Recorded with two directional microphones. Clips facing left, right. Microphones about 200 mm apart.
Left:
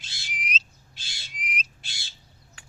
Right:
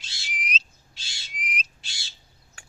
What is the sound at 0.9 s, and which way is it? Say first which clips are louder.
Owl: even; 55° left (ahead or behind).